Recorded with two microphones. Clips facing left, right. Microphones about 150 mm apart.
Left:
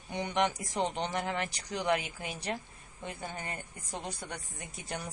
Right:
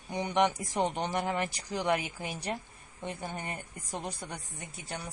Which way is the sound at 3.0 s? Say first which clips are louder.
Right 2 dB; 15° right (ahead or behind).